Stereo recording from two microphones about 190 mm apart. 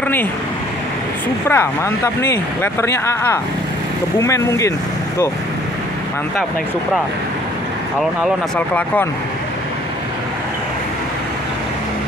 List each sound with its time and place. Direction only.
1.5 s speech: 10° left (ahead or behind)
8.5 s speech: 10° left (ahead or behind)